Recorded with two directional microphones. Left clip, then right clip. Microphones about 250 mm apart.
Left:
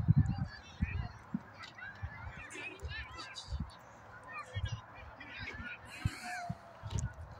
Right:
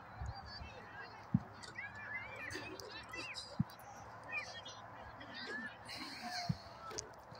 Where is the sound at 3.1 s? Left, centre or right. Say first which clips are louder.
Right 1 dB; left.